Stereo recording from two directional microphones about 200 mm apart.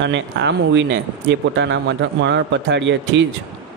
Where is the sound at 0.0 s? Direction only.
65° right (ahead or behind).